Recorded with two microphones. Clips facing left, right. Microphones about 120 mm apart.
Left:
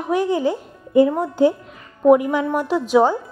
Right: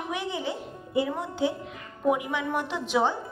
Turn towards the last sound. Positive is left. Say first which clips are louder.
# left 10 dB
turn(degrees=45)  # may be behind; listen again after turning